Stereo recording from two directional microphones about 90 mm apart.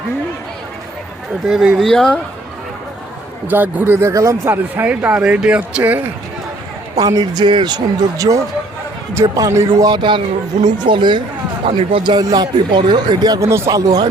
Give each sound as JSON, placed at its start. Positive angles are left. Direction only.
{"t": 1.5, "sound": "speech", "side_deg": -5}
{"t": 3.4, "sound": "a man's voice", "side_deg": -20}
{"t": 6.9, "sound": "speech", "side_deg": -45}
{"t": 8.2, "sound": "speech", "side_deg": -40}
{"t": 9.9, "sound": "speech", "side_deg": -60}
{"t": 11.6, "sound": "speech", "side_deg": -90}
{"t": 12.2, "sound": "speech", "side_deg": -45}
{"t": 13.4, "sound": "speech", "side_deg": -30}